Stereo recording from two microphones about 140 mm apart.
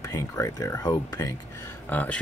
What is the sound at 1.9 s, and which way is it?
Speech, 10° left (ahead or behind).